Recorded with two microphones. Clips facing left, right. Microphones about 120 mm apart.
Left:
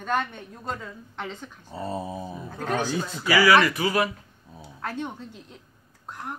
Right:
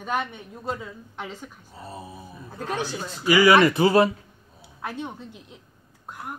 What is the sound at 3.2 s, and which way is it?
Speech, 20° right (ahead or behind).